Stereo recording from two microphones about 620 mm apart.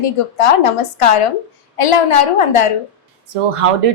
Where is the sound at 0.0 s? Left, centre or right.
Left.